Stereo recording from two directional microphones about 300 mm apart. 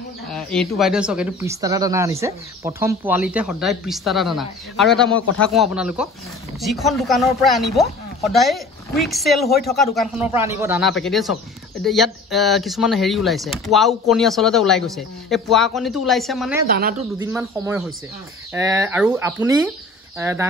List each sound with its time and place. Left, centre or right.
0.3 s speech: centre
16.6 s speech: right
17.2 s speech: centre